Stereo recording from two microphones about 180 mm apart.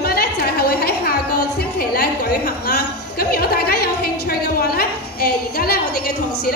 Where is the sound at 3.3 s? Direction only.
60° left (ahead or behind).